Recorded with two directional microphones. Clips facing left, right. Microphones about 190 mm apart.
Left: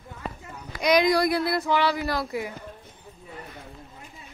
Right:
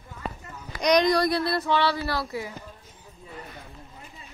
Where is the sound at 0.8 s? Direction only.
5° left (ahead or behind).